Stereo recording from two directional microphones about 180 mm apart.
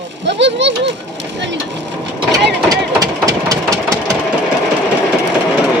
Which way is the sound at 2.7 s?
20° right (ahead or behind).